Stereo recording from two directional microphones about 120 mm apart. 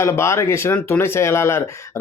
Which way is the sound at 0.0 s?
20° left (ahead or behind).